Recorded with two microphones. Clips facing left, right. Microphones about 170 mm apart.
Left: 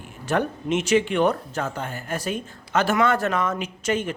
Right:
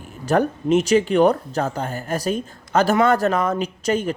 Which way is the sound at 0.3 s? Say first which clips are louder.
Right 5 dB; 40° right (ahead or behind).